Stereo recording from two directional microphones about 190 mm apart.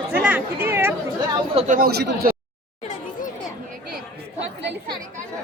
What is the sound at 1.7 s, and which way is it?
Speech, 55° right (ahead or behind).